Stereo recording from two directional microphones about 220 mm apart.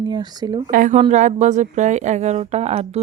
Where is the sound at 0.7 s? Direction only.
35° right (ahead or behind).